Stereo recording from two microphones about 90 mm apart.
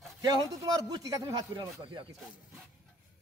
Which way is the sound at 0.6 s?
40° right (ahead or behind).